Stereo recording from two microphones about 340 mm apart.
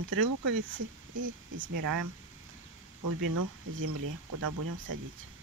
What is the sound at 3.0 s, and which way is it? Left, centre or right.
Speech, right.